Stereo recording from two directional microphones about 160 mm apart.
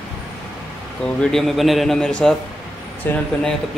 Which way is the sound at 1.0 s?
Centre (ahead or behind).